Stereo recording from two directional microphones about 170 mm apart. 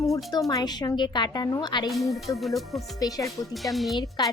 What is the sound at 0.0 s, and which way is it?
Speech, 20° left (ahead or behind).